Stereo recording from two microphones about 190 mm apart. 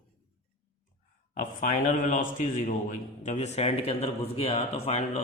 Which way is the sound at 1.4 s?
40° left (ahead or behind).